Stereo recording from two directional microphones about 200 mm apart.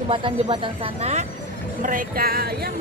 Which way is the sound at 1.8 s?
45° right (ahead or behind).